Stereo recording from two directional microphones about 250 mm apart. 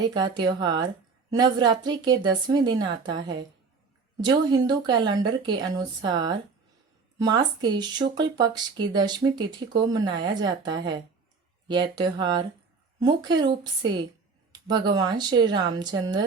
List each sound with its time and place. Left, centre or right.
0.1 s speech: centre
3.2 s a woman's voice: right
4.2 s speech: centre
11.7 s speech: centre
14.5 s speech: centre